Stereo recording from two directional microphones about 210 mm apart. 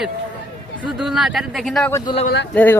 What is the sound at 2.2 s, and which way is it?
Speech, 55° left (ahead or behind).